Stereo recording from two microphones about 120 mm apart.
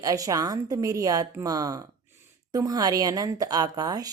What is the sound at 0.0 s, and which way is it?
Speech, 30° right (ahead or behind).